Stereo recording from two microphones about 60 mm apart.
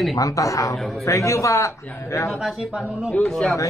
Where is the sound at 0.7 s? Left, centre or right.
Centre.